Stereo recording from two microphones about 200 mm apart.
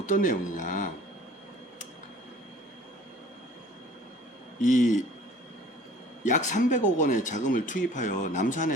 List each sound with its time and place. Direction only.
0.0 s speech: 40° left (ahead or behind)
4.6 s speech: 40° left (ahead or behind)
6.2 s speech: 40° left (ahead or behind)